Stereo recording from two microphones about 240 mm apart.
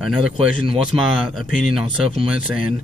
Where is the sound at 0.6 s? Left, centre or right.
Right.